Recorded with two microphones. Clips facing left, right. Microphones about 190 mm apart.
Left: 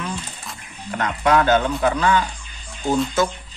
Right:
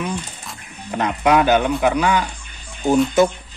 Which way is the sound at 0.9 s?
15° right (ahead or behind).